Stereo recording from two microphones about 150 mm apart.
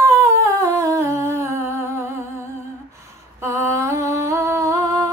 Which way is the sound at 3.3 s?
15° right (ahead or behind).